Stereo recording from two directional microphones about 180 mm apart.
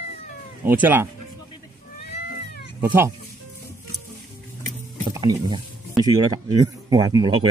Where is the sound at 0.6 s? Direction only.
10° right (ahead or behind).